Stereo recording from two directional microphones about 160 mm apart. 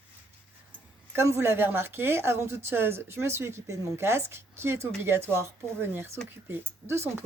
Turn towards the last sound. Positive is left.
turn(degrees=-15)  # may be behind; listen again after turning